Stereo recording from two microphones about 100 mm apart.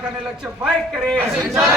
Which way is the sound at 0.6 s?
Centre (ahead or behind).